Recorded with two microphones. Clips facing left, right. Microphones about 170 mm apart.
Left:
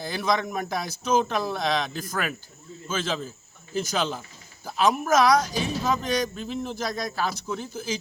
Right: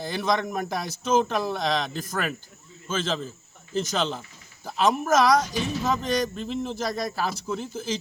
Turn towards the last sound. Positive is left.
turn(degrees=0)  # may be behind; listen again after turning